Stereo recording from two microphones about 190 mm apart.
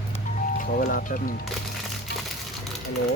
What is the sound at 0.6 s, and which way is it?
Speech, 45° left (ahead or behind).